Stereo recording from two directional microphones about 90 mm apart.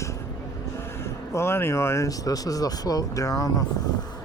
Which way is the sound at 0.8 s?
30° left (ahead or behind).